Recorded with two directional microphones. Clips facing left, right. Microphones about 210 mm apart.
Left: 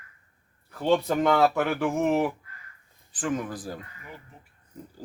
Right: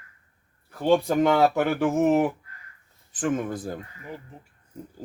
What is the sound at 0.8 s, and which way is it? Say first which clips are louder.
A man's voice: right 3 dB; 10° right (ahead or behind).